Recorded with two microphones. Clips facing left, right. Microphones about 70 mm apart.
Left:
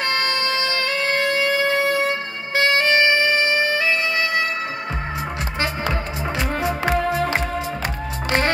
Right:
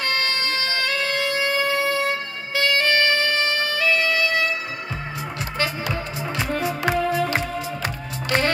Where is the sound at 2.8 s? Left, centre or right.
Centre.